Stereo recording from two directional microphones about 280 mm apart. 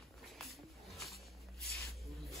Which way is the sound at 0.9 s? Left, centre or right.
Centre.